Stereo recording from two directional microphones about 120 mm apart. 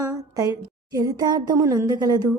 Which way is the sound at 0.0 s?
30° right (ahead or behind).